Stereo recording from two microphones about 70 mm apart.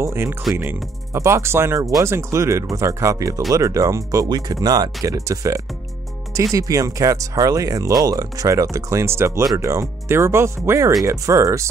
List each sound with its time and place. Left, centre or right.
0.0 s music: right
1.1 s speech: right